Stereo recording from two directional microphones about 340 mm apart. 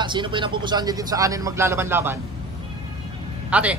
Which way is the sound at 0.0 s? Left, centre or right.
Centre.